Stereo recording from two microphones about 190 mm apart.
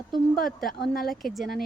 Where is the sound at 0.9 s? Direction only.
50° left (ahead or behind).